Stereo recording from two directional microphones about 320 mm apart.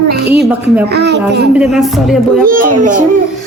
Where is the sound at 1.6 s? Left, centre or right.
Centre.